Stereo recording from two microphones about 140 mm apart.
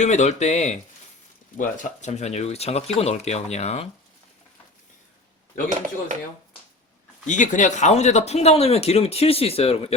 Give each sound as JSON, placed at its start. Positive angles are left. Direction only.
{"t": 0.0, "sound": "speech", "side_deg": 55}
{"t": 1.5, "sound": "speech", "side_deg": 65}
{"t": 7.3, "sound": "speech", "side_deg": 65}